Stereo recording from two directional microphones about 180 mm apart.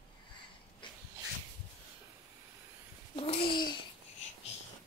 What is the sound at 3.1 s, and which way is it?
Babbling, 30° left (ahead or behind).